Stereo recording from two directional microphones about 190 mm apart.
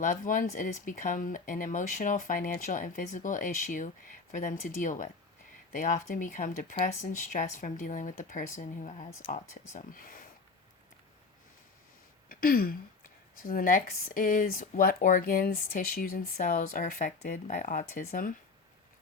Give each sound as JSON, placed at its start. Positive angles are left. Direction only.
{"t": 0.0, "sound": "speech", "side_deg": 45}
{"t": 12.3, "sound": "a sound", "side_deg": 50}
{"t": 13.4, "sound": "speech", "side_deg": 50}